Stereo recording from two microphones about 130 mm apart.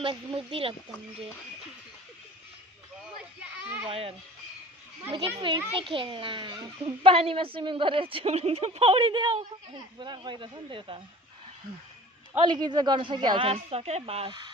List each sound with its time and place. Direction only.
0.0 s speech: 40° right (ahead or behind)
3.8 s speech: 45° right (ahead or behind)
5.1 s a woman's voice: 40° right (ahead or behind)
12.4 s a woman's voice: 35° right (ahead or behind)